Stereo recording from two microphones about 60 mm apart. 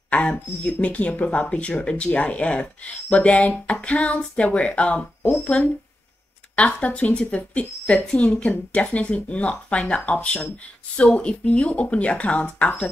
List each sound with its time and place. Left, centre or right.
0.1 s speech: left